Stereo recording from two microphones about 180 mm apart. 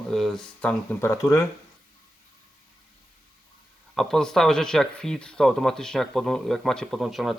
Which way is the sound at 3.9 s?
5° left (ahead or behind).